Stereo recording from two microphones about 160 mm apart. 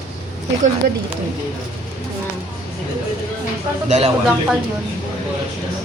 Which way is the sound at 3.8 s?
45° right (ahead or behind).